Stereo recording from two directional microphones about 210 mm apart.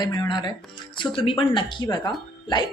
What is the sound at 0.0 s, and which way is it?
Speech, 20° left (ahead or behind).